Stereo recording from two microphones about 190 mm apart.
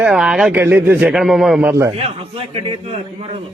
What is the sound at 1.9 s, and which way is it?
A man's voice, 30° right (ahead or behind).